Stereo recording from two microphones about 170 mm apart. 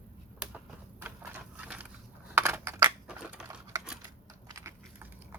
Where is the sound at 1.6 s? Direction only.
10° right (ahead or behind).